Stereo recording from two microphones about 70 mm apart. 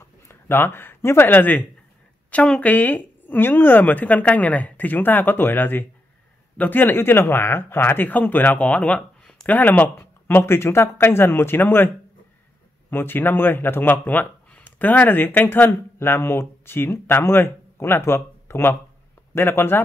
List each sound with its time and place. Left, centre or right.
0.0 s speech: left; by 9.5 s centre
9.5 s speech: left
12.9 s speech: left